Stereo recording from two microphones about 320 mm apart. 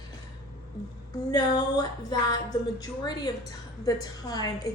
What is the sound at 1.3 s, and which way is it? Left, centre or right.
A woman's voice, centre.